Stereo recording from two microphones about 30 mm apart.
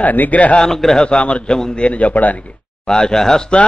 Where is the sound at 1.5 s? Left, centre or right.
Centre.